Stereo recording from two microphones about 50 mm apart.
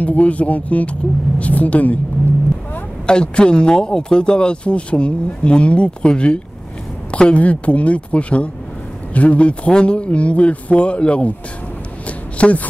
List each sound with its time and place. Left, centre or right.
0.0 s a woman's voice: left
3.1 s speech: centre
12.4 s a woman's voice: left